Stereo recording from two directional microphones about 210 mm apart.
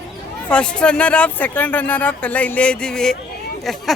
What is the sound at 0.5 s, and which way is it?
Speech, 5° left (ahead or behind).